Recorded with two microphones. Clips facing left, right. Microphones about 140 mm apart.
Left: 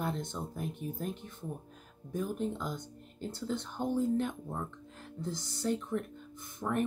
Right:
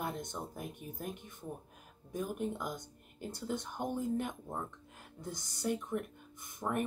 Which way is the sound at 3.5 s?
15° right (ahead or behind).